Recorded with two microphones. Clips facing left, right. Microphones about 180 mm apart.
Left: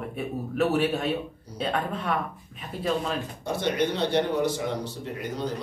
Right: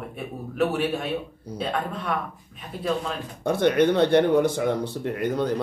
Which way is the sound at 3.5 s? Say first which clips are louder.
Right 7 dB; 55° right (ahead or behind).